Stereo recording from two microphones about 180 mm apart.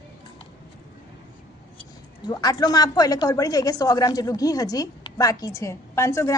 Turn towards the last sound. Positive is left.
turn(degrees=15)  # may be behind; listen again after turning